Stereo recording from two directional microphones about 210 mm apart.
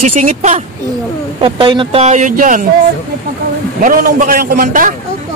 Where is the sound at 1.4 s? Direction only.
25° right (ahead or behind); by 2.7 s 40° right (ahead or behind).